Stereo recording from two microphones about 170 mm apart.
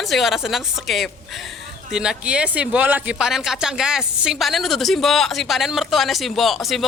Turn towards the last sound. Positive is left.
turn(degrees=0)  # may be behind; listen again after turning